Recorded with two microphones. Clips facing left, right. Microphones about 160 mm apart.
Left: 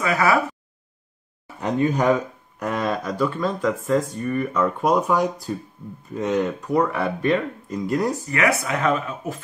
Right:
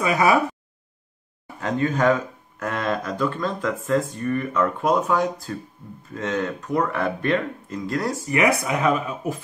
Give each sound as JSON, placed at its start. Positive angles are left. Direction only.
{"t": 0.0, "sound": "a sound", "side_deg": -20}
{"t": 1.6, "sound": "speech", "side_deg": 15}
{"t": 8.3, "sound": "speech", "side_deg": -15}